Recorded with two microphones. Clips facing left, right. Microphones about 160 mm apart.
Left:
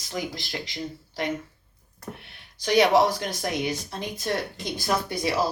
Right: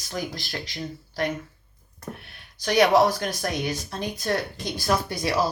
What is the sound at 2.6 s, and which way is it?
Speech, 25° left (ahead or behind).